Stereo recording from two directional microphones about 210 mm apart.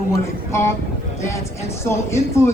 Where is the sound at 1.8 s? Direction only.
15° left (ahead or behind).